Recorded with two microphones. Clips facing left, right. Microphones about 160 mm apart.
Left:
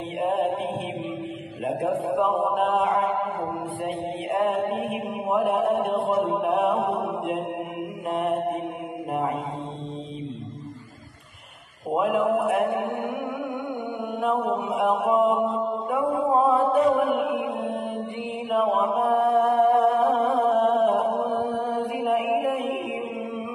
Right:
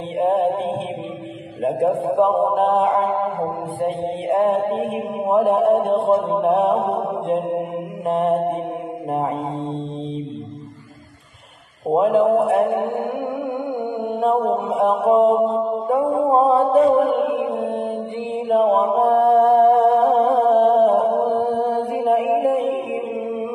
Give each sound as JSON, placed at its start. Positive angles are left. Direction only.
{"t": 0.2, "sound": "mantra", "side_deg": -30}
{"t": 1.6, "sound": "a man's voice", "side_deg": -35}
{"t": 11.9, "sound": "speech", "side_deg": -30}
{"t": 14.0, "sound": "mantra", "side_deg": -30}